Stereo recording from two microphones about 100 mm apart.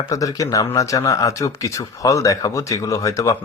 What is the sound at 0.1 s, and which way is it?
Speech, 35° left (ahead or behind).